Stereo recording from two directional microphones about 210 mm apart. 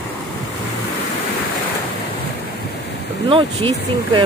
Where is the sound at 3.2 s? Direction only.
25° right (ahead or behind).